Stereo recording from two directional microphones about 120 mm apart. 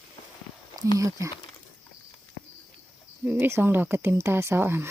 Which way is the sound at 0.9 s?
30° right (ahead or behind).